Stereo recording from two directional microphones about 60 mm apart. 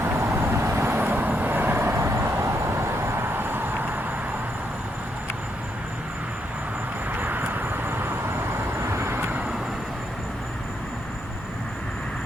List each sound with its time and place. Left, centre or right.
0.0 s vehicle: right
0.9 s vehicle: right
7.1 s vehicle: right
9.2 s vehicle: right